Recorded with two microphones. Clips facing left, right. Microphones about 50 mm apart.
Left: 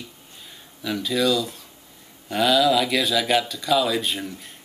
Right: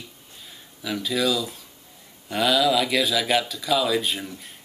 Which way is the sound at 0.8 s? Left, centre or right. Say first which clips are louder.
Left 2 dB; centre.